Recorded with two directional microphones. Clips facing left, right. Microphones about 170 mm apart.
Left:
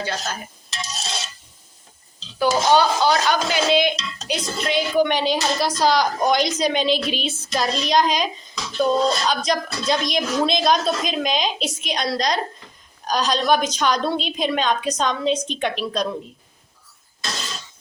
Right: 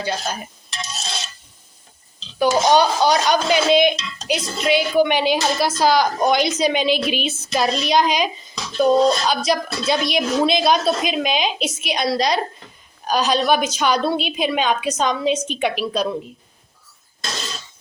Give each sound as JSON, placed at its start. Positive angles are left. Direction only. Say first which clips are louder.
{"t": 0.0, "sound": "a woman's voice", "louder": "right 3 dB", "side_deg": -15}
{"t": 2.4, "sound": "a woman's voice", "louder": "right 2 dB", "side_deg": -15}